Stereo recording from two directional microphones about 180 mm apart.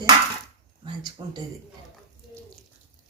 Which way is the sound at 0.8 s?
25° right (ahead or behind).